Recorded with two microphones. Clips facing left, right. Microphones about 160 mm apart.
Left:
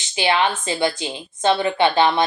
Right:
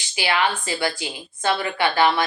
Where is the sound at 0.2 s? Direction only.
25° left (ahead or behind).